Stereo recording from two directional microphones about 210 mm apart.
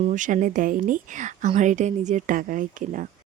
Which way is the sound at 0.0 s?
40° right (ahead or behind).